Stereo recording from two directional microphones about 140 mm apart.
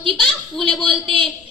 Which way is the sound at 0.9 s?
40° right (ahead or behind).